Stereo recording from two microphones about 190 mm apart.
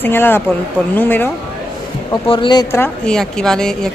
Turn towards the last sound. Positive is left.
turn(degrees=5)  # may be behind; listen again after turning